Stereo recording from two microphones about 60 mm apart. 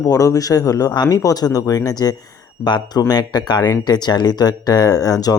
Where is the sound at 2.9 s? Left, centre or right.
Left.